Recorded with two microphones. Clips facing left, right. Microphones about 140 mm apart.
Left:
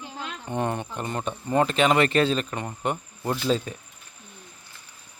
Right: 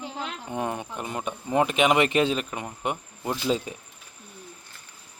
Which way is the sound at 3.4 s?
15° right (ahead or behind).